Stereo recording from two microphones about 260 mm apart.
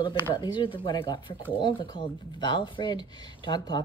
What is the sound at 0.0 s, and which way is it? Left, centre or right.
Speech, centre.